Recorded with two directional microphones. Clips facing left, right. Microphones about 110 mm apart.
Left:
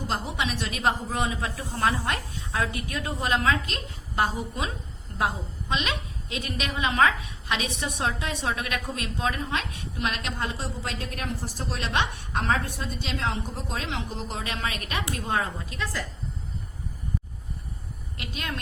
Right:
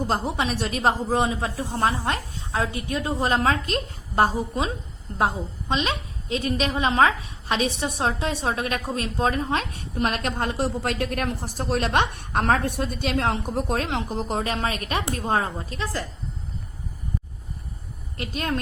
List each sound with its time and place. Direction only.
0.1 s a woman's voice: 35° right (ahead or behind)
18.2 s a woman's voice: 40° right (ahead or behind)